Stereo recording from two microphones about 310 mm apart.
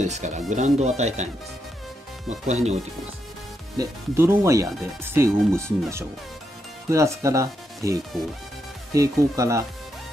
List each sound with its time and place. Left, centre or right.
0.0 s speech: right
3.7 s speech: centre